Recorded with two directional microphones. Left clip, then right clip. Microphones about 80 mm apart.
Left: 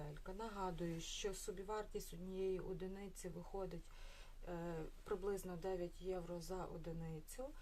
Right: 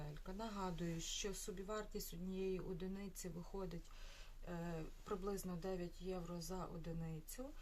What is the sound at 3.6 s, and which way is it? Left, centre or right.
Speech, left.